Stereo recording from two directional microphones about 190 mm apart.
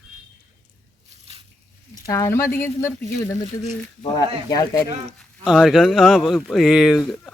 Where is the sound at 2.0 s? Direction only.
15° left (ahead or behind).